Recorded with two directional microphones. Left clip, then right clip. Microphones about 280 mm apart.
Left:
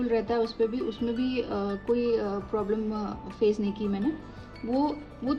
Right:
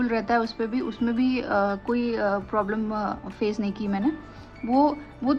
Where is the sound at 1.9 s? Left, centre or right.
Centre.